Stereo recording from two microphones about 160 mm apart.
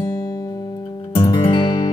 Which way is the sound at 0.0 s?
20° left (ahead or behind).